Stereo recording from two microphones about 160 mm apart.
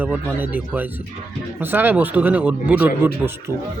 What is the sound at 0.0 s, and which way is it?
Speech, 10° right (ahead or behind).